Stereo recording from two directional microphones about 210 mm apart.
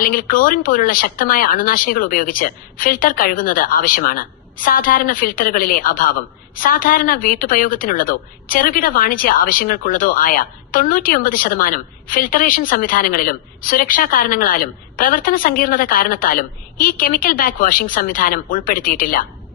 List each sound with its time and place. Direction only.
0.0 s a woman's voice: 40° left (ahead or behind)